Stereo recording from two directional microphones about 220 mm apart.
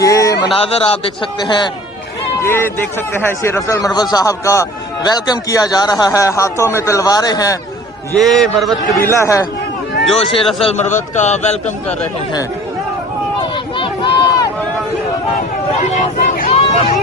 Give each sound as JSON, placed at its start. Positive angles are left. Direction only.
{"t": 0.0, "sound": "a sound", "side_deg": 15}
{"t": 0.4, "sound": "a man's voice", "side_deg": 25}
{"t": 8.2, "sound": "a man's voice", "side_deg": 0}
{"t": 10.2, "sound": "a man's voice", "side_deg": 25}
{"t": 13.7, "sound": "run", "side_deg": 20}
{"t": 15.8, "sound": "a sound", "side_deg": 35}